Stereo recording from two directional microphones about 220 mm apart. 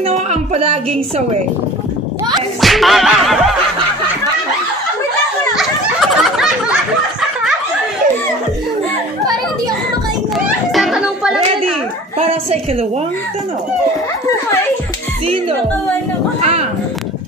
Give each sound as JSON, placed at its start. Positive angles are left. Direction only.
{"t": 0.0, "sound": "a woman's voice", "side_deg": -30}
{"t": 2.6, "sound": "music", "side_deg": 0}
{"t": 5.6, "sound": "a sound", "side_deg": 0}
{"t": 10.3, "sound": "cat", "side_deg": 0}
{"t": 12.2, "sound": "a sound", "side_deg": -30}
{"t": 16.3, "sound": "a woman's voice", "side_deg": -30}